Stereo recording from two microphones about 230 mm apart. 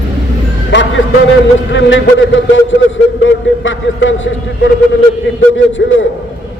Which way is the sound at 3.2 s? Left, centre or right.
Left.